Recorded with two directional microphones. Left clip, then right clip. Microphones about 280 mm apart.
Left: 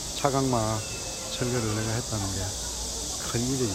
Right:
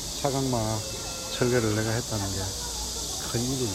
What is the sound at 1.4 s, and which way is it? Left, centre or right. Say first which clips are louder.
Speech: right 5 dB; centre.